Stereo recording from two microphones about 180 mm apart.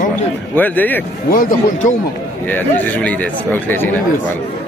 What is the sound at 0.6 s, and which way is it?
Speech, 10° left (ahead or behind).